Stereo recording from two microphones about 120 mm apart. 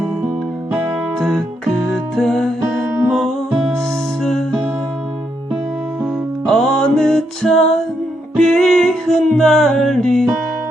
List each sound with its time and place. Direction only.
1.2 s music: centre (ahead or behind)
2.8 s music: 15° right (ahead or behind)
4.2 s music: 5° left (ahead or behind)
6.4 s music: 5° left (ahead or behind)